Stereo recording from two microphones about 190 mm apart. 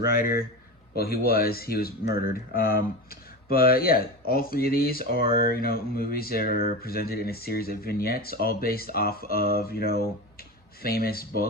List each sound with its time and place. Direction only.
0.0 s speech: 50° left (ahead or behind)